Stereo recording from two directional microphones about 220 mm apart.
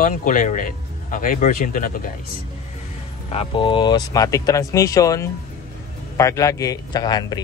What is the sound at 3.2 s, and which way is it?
A man's voice, 25° left (ahead or behind).